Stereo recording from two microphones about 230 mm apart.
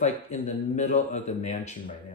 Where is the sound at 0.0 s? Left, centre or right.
Left.